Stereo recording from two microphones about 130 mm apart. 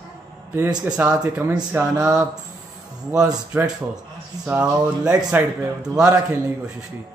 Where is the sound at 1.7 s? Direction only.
20° right (ahead or behind).